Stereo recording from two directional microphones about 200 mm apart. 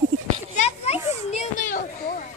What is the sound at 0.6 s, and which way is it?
Children playing, 30° left (ahead or behind).